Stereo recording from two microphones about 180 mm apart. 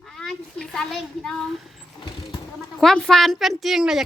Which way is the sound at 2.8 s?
5° left (ahead or behind).